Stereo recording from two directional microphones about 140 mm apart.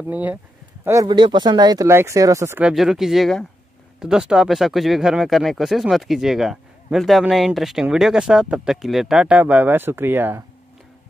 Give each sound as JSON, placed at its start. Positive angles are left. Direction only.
{"t": 0.0, "sound": "speech", "side_deg": -10}
{"t": 1.0, "sound": "speech", "side_deg": -35}
{"t": 2.6, "sound": "speech", "side_deg": -5}